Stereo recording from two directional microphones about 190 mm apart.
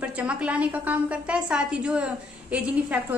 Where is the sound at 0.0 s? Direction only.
5° right (ahead or behind).